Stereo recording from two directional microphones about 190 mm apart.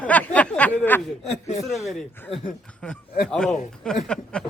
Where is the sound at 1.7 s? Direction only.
Centre (ahead or behind).